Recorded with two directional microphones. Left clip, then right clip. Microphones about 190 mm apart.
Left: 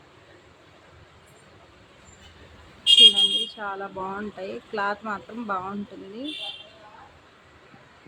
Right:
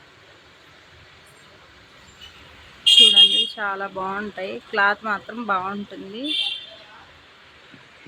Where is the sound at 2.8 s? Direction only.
15° right (ahead or behind).